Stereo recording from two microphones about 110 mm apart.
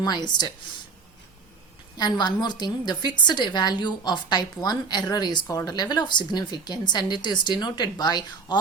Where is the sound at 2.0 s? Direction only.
40° left (ahead or behind).